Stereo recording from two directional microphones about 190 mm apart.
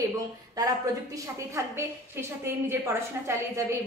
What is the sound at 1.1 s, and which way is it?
A woman's voice, 15° right (ahead or behind).